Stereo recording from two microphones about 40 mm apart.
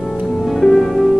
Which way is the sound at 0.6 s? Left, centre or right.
Centre.